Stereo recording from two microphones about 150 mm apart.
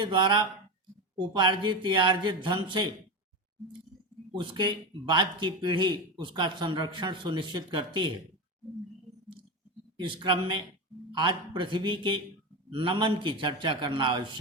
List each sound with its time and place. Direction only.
0.0 s speech: 30° right (ahead or behind)
4.4 s speech: 30° right (ahead or behind)
10.0 s speech: 35° right (ahead or behind)